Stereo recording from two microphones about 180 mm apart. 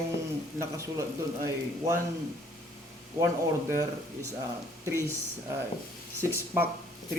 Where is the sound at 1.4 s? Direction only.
15° right (ahead or behind).